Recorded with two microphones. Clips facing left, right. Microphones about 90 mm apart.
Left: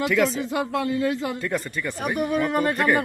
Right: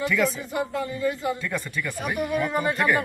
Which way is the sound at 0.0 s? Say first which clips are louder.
Left 3 dB; 70° left (ahead or behind).